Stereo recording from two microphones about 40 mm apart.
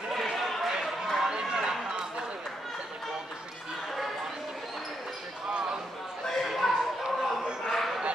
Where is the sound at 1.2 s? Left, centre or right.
Centre.